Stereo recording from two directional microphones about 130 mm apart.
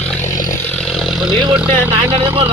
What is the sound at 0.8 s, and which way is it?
Vehicle, centre (ahead or behind).